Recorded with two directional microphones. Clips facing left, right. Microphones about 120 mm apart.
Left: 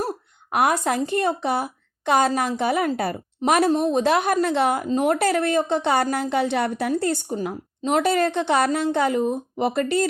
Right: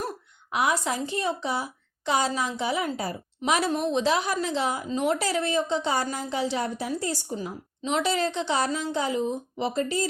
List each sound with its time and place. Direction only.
0.5 s a woman's voice: 55° left (ahead or behind)
3.7 s a woman's voice: 35° left (ahead or behind)
4.0 s a woman's voice: 55° left (ahead or behind)
7.8 s a woman's voice: 50° left (ahead or behind); by 10.1 s 65° left (ahead or behind)